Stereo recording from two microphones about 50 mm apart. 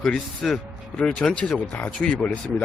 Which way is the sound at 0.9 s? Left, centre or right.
Centre.